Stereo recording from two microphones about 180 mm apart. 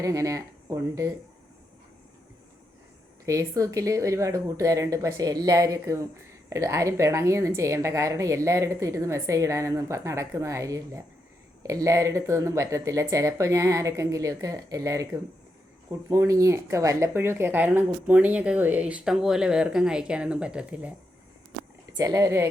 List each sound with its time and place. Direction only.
0.0 s speech: 15° right (ahead or behind)
3.2 s speech: 15° right (ahead or behind)
21.9 s speech: 20° right (ahead or behind)